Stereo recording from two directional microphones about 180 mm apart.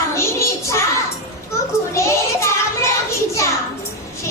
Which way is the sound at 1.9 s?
15° left (ahead or behind).